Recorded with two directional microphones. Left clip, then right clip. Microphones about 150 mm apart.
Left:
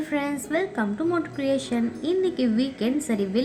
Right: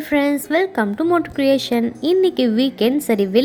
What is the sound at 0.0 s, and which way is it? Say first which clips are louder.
A woman's voice: right 9 dB; 60° right (ahead or behind).